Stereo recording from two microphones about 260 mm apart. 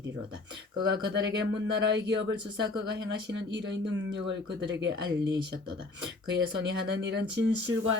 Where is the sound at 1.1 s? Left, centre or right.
Right.